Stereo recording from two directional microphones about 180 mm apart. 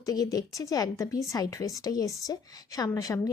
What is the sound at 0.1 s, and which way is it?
A woman's voice, 20° left (ahead or behind).